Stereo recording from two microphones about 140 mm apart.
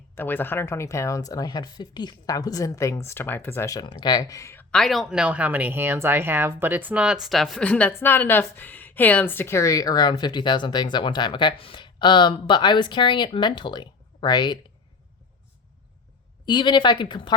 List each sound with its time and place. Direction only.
0.2 s speech: 15° left (ahead or behind)
4.7 s speech: centre (ahead or behind); by 14.6 s 30° left (ahead or behind)
16.5 s speech: 35° left (ahead or behind)